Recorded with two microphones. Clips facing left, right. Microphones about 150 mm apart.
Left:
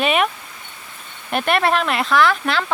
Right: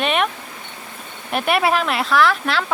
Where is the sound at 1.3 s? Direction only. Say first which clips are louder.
Even; 5° right (ahead or behind).